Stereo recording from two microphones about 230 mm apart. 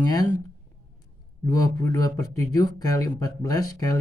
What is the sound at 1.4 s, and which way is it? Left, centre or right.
Speech, centre.